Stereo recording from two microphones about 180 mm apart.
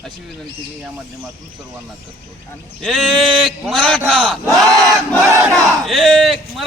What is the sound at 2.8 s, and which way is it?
A man's voice, centre (ahead or behind).